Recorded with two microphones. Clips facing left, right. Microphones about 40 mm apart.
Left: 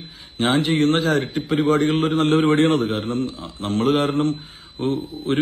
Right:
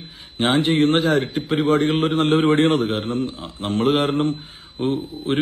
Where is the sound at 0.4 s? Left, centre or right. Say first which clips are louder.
Right 1 dB; right.